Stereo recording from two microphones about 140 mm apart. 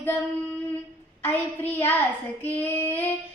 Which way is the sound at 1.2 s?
15° left (ahead or behind).